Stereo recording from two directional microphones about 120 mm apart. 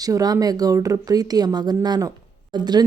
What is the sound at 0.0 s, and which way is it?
Speech, 30° right (ahead or behind).